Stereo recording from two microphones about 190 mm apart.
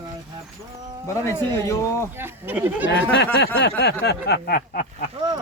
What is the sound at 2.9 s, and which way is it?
Speech, 60° left (ahead or behind).